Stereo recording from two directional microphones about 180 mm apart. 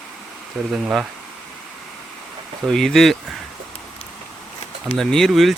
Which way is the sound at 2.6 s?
Centre (ahead or behind).